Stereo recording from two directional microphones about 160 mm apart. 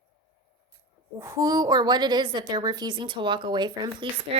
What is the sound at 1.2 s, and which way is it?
A woman's voice, 20° right (ahead or behind).